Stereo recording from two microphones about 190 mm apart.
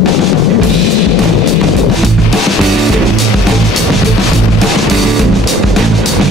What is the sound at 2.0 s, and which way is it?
Music, centre (ahead or behind).